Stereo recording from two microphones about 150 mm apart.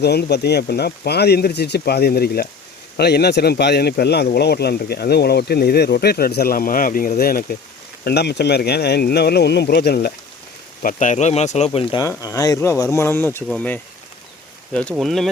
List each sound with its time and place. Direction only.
0.0 s speech: 90° left
8.0 s speech: 90° left
10.8 s speech: 55° left (ahead or behind)
11.9 s speech: 20° left (ahead or behind); by 15.3 s centre (ahead or behind)